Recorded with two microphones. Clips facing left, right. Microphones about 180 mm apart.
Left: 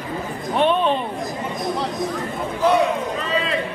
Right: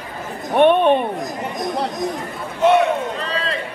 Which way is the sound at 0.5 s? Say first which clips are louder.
Right 5 dB; 60° right (ahead or behind).